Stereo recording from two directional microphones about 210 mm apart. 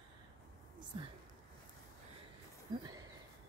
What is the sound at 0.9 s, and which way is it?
Speech, 25° right (ahead or behind).